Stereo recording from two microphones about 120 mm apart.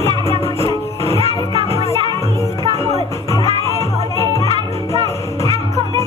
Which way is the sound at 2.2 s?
25° left (ahead or behind).